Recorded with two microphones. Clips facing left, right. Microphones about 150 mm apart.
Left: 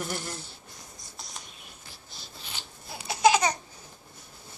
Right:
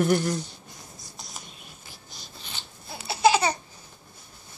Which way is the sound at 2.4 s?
10° left (ahead or behind).